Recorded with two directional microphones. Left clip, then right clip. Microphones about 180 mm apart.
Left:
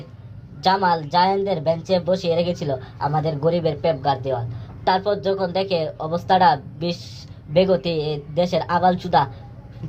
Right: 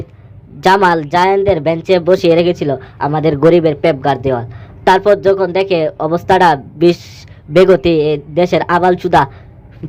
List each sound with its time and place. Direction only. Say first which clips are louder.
0.6 s a man's voice: right 9 dB; 45° right (ahead or behind)